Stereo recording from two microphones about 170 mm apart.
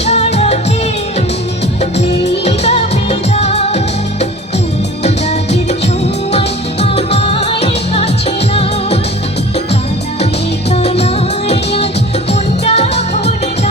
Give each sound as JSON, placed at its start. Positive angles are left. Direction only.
{"t": 0.0, "sound": "music", "side_deg": 40}
{"t": 1.8, "sound": "music", "side_deg": 40}
{"t": 5.0, "sound": "music", "side_deg": 40}
{"t": 10.7, "sound": "music", "side_deg": 35}